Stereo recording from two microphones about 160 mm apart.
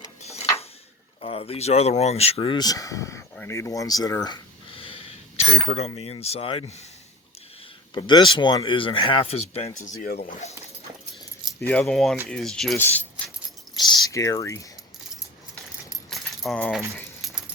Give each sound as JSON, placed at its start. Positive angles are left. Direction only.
{"t": 0.2, "sound": "tick-tock", "side_deg": 40}
{"t": 1.2, "sound": "speech", "side_deg": 35}
{"t": 3.3, "sound": "a sound", "side_deg": 15}
{"t": 5.6, "sound": "speech", "side_deg": 40}
{"t": 7.9, "sound": "speech", "side_deg": 30}
{"t": 10.0, "sound": "speech", "side_deg": 65}
{"t": 11.6, "sound": "speech", "side_deg": 10}
{"t": 13.7, "sound": "speech", "side_deg": 25}
{"t": 15.9, "sound": "keys jangling", "side_deg": 0}